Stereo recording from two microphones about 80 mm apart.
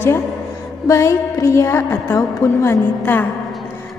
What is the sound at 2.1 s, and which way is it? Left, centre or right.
Speech, left.